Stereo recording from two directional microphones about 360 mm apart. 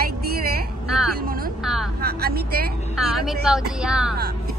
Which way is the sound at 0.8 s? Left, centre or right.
Centre.